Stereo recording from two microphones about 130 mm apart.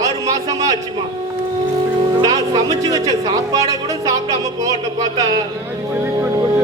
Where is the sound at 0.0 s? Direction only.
30° right (ahead or behind).